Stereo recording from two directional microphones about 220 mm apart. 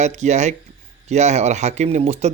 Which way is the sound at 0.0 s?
30° right (ahead or behind).